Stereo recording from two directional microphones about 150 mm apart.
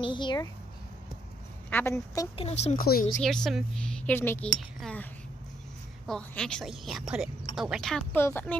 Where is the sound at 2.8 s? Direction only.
75° left (ahead or behind).